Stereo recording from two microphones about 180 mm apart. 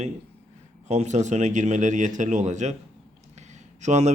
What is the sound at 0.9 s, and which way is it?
A man's voice, 40° right (ahead or behind).